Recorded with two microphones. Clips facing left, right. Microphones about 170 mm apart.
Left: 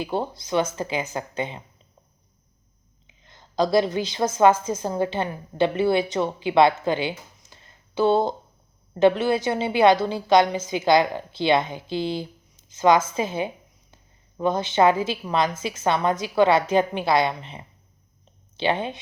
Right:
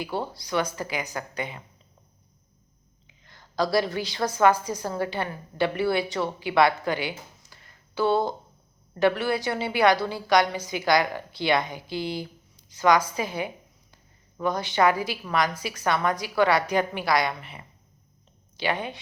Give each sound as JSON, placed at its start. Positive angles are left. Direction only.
{"t": 0.0, "sound": "a woman's voice", "side_deg": 20}
{"t": 3.1, "sound": "a woman's voice", "side_deg": 20}